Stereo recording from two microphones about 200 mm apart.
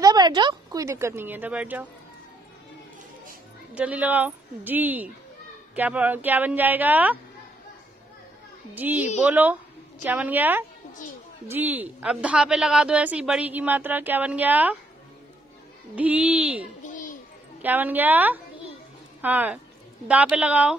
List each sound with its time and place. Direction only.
0.0 s a woman's voice: 20° right (ahead or behind)
3.7 s a woman's voice: 5° right (ahead or behind)
8.7 s a woman's voice: 10° right (ahead or behind)
15.9 s a woman's voice: 5° right (ahead or behind)
16.8 s a sound: 40° left (ahead or behind)
17.6 s a woman's voice: 10° right (ahead or behind)